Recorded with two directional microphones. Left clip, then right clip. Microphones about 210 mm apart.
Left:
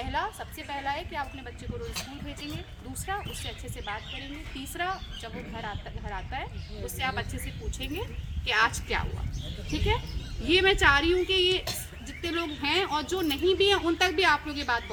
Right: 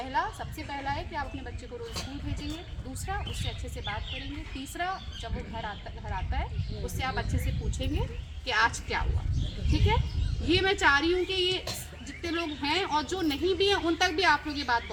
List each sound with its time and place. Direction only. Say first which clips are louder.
0.0 s a woman's voice: right 1 dB; 10° left (ahead or behind)
3.1 s speech: left 2 dB; 5° left (ahead or behind)
8.4 s speech: left 1 dB; 5° left (ahead or behind)
10.4 s speech: left 3 dB; centre (ahead or behind)